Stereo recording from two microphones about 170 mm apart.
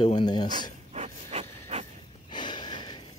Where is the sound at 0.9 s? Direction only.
40° right (ahead or behind).